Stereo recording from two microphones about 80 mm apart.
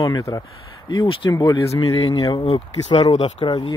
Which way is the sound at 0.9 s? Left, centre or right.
Left.